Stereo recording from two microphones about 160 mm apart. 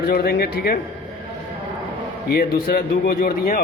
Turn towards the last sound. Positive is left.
turn(degrees=65)  # may be behind; listen again after turning